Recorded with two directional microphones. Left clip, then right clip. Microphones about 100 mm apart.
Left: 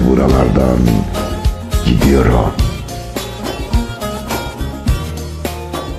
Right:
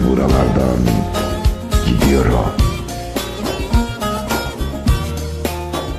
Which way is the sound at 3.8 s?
25° right (ahead or behind).